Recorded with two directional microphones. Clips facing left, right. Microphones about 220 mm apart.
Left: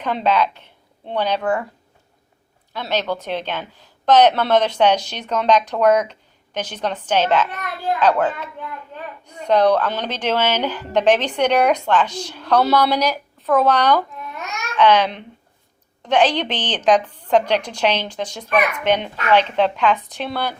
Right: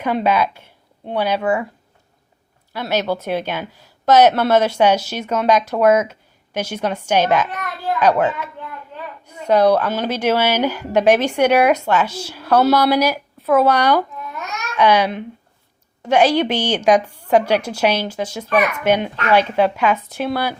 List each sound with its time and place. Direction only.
0.0 s speech: 10° right (ahead or behind)
2.7 s speech: 10° right (ahead or behind)